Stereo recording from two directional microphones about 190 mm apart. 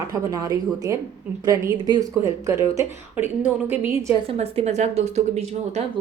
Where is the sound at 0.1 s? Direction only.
20° right (ahead or behind).